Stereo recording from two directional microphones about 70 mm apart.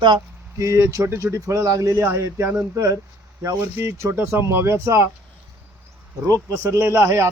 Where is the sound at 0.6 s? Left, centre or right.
Right.